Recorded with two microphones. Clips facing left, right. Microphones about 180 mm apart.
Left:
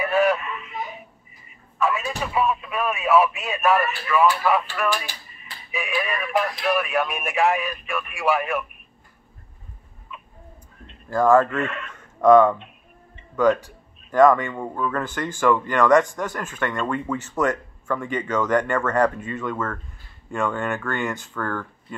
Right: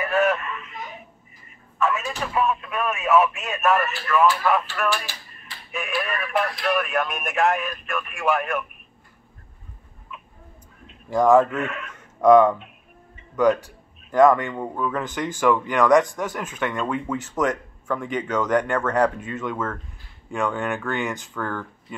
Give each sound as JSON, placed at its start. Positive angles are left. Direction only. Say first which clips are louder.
{"t": 0.0, "sound": "a sound", "louder": "left 1 dB", "side_deg": 0}
{"t": 1.5, "sound": "speech", "louder": "even", "side_deg": 0}
{"t": 11.3, "sound": "speech", "louder": "right 1 dB", "side_deg": -5}
{"t": 13.1, "sound": "music", "louder": "even", "side_deg": -10}
{"t": 14.1, "sound": "speech", "louder": "even", "side_deg": -10}
{"t": 15.0, "sound": "speech", "louder": "even", "side_deg": -15}